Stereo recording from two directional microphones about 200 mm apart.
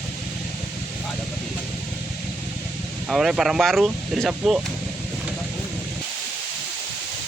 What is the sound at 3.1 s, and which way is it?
Speech, centre (ahead or behind).